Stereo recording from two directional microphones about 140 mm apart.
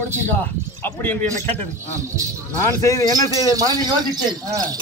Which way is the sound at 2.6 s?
20° left (ahead or behind).